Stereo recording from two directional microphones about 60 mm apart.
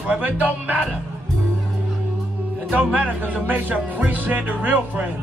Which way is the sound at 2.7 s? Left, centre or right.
Right.